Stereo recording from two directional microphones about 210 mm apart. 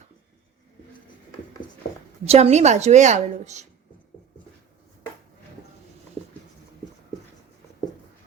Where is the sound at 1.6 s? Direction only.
20° left (ahead or behind).